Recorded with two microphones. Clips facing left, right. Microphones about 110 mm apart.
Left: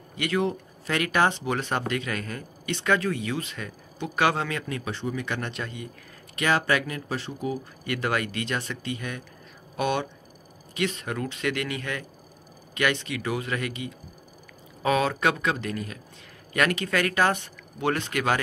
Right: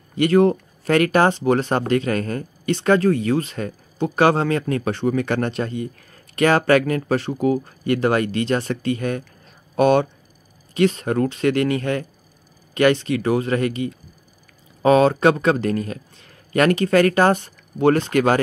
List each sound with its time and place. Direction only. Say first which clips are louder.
0.2 s speech: right 11 dB; 45° right (ahead or behind); by 7.6 s 60° right (ahead or behind)
7.8 s speech: right 8 dB; 35° right (ahead or behind)